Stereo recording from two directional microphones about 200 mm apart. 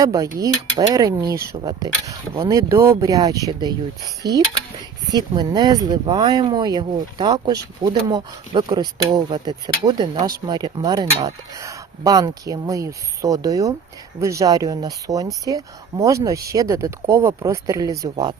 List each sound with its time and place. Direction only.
0.0 s speech: 15° right (ahead or behind)
4.2 s speech: 55° right (ahead or behind)
5.1 s speech: 20° right (ahead or behind)